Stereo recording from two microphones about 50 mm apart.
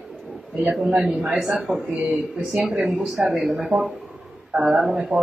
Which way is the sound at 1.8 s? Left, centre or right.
Right.